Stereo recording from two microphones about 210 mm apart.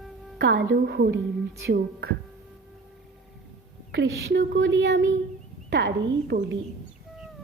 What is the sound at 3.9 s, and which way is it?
Speech, 55° right (ahead or behind).